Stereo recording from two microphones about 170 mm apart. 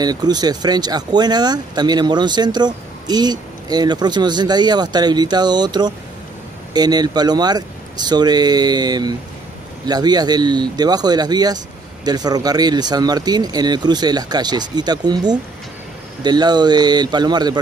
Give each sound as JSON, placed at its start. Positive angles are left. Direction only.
{"t": 0.0, "sound": "speech", "side_deg": -25}